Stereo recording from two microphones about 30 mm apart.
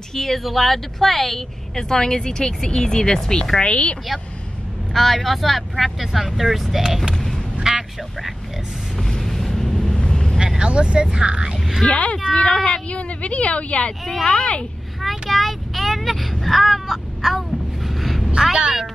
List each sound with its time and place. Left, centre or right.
0.1 s speech: centre
1.8 s speech: centre
3.6 s speech: left
4.9 s speech: centre
7.7 s a sound: centre
9.2 s vehicle: centre
9.9 s vehicle: left
10.6 s speech: right
11.9 s a woman's voice: left
12.3 s speech: left
12.9 s a woman's voice: left
15.0 s vehicle: centre
18.5 s speech: right